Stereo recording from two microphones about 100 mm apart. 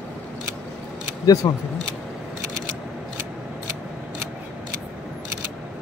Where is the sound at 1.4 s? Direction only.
35° left (ahead or behind).